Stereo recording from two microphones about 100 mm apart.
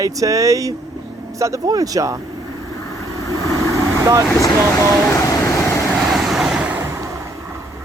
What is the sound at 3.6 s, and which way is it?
Vehicle, 35° right (ahead or behind).